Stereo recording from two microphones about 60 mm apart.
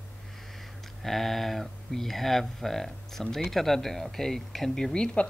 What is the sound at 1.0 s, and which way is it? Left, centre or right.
Speech, centre.